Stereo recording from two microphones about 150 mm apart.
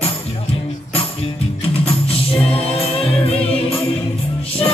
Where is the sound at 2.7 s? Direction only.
40° left (ahead or behind).